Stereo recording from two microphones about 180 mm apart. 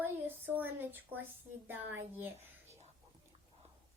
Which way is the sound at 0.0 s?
10° right (ahead or behind).